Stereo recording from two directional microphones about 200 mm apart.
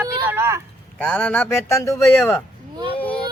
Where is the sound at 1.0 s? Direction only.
5° left (ahead or behind).